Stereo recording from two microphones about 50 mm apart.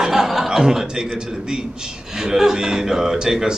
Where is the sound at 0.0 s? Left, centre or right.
Centre.